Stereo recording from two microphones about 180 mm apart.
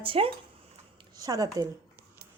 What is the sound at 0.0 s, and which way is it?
Speech, 30° right (ahead or behind).